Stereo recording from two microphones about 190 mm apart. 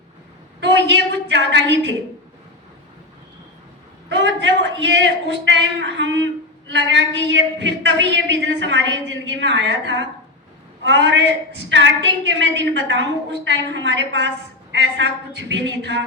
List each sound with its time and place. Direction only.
0.6 s a woman's voice: 70° right (ahead or behind)
4.1 s a man's voice: 75° right (ahead or behind)